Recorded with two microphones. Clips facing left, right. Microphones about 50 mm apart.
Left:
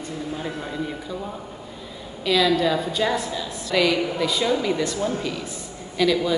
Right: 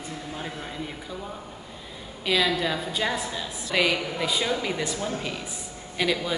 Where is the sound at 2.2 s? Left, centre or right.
Centre.